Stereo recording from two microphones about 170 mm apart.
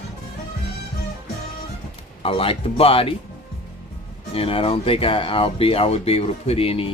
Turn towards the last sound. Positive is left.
turn(degrees=35)  # may be behind; listen again after turning